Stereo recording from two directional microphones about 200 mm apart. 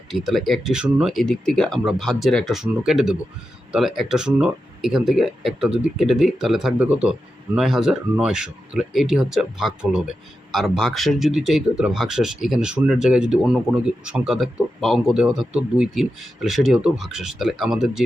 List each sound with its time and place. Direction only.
0.1 s speech: centre (ahead or behind)